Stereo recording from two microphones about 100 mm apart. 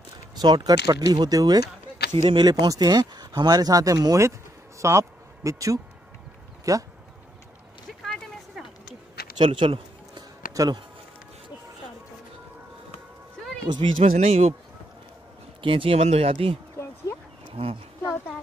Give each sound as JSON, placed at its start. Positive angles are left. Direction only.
{"t": 0.4, "sound": "speech", "side_deg": -45}
{"t": 2.1, "sound": "speech", "side_deg": -50}
{"t": 2.7, "sound": "speech", "side_deg": -40}
{"t": 8.1, "sound": "a sound", "side_deg": 0}
{"t": 9.4, "sound": "a sound", "side_deg": -60}
{"t": 10.5, "sound": "speech", "side_deg": -35}
{"t": 13.7, "sound": "speech", "side_deg": -80}
{"t": 15.6, "sound": "speech", "side_deg": -60}
{"t": 16.8, "sound": "a sound", "side_deg": 30}
{"t": 17.6, "sound": "speech", "side_deg": -80}